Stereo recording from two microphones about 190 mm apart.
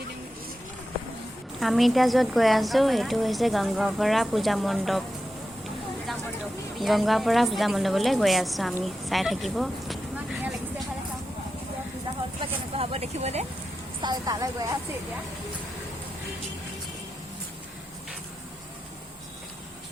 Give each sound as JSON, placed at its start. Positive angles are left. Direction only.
{"t": 1.5, "sound": "a woman's voice", "side_deg": 0}
{"t": 6.7, "sound": "a woman's voice", "side_deg": 0}
{"t": 12.7, "sound": "a sound", "side_deg": -30}
{"t": 14.0, "sound": "a woman's voice", "side_deg": -20}